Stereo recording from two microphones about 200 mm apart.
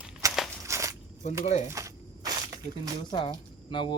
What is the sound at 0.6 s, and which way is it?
Walk, 15° right (ahead or behind).